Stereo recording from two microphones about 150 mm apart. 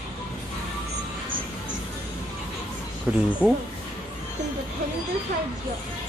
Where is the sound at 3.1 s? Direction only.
10° right (ahead or behind).